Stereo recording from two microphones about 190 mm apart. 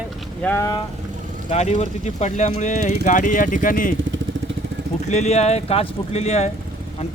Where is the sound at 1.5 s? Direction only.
35° left (ahead or behind).